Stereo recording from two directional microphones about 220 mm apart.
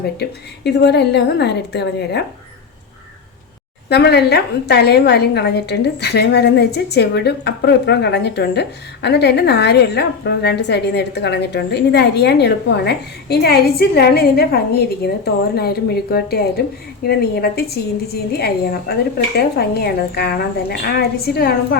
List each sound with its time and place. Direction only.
0.2 s a woman's voice: 50° left (ahead or behind)
3.8 s a woman's voice: 50° left (ahead or behind)